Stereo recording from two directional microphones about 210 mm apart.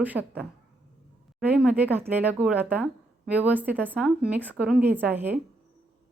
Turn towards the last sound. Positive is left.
turn(degrees=-10)  # may be behind; listen again after turning